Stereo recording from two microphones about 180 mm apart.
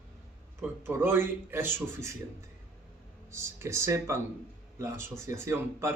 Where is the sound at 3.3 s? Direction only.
15° right (ahead or behind).